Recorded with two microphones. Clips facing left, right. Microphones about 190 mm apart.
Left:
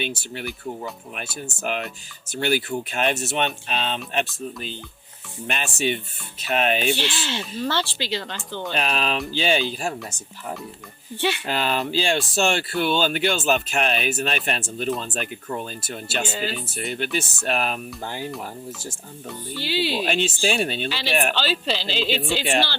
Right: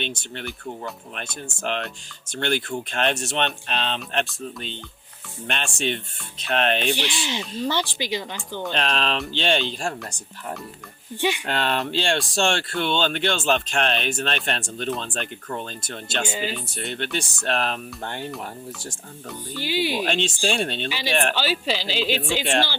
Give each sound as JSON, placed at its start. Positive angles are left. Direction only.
{"t": 0.0, "sound": "speech", "side_deg": 5}
{"t": 6.9, "sound": "speech", "side_deg": -15}
{"t": 8.7, "sound": "speech", "side_deg": 5}
{"t": 11.2, "sound": "speech", "side_deg": -15}
{"t": 11.4, "sound": "speech", "side_deg": 5}
{"t": 19.5, "sound": "speech", "side_deg": -15}
{"t": 20.0, "sound": "speech", "side_deg": 5}
{"t": 21.3, "sound": "speech", "side_deg": -10}